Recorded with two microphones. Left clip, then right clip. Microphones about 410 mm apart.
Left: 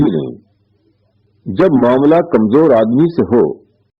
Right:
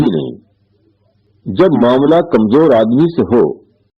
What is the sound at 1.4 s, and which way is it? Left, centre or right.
A man's voice, right.